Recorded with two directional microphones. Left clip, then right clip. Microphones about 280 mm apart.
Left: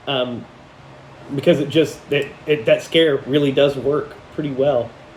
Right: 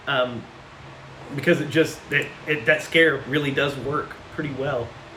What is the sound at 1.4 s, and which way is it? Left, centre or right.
Speech, centre.